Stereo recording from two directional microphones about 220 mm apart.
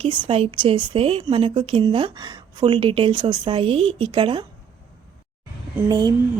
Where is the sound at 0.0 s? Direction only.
25° right (ahead or behind).